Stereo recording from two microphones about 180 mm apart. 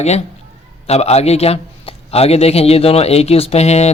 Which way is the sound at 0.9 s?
35° left (ahead or behind).